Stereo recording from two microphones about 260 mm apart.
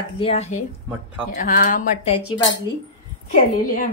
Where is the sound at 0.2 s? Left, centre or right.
Left.